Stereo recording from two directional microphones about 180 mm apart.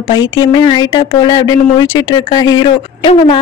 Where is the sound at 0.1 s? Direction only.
25° left (ahead or behind).